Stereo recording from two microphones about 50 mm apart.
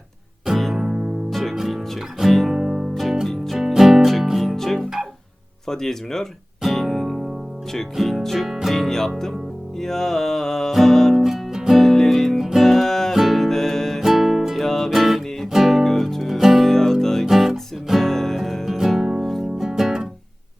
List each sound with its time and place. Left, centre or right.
0.4 s music: centre
0.8 s music: centre
1.3 s music: centre
2.9 s music: centre
3.6 s music: centre
5.6 s speech: centre
6.6 s music: centre
8.4 s music: centre
8.7 s speech: centre
9.7 s music: centre
11.8 s music: centre
14.0 s music: centre
14.6 s music: centre
19.5 s music: centre